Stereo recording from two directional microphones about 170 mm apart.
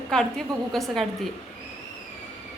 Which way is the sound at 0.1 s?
5° left (ahead or behind).